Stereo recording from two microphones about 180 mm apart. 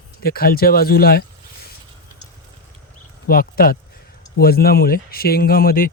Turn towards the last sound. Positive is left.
turn(degrees=55)  # may be behind; listen again after turning